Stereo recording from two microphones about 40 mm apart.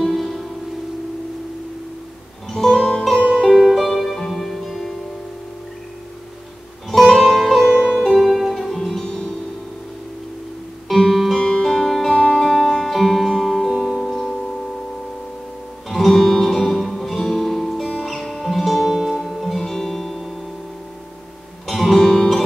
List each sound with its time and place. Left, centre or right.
0.0 s music: centre
2.5 s music: centre
6.9 s music: centre
7.7 s music: centre
8.0 s music: centre
9.0 s music: left
11.0 s music: centre
11.3 s music: centre
12.2 s music: centre
13.7 s music: centre
15.9 s music: centre
21.6 s music: centre